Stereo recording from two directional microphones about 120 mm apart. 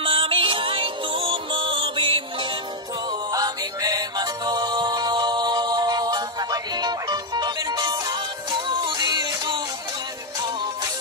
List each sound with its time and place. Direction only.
0.0 s music: 50° right (ahead or behind)
3.3 s music: 30° right (ahead or behind)